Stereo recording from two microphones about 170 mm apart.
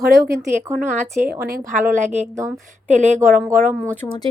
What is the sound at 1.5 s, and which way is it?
Speech, 50° right (ahead or behind).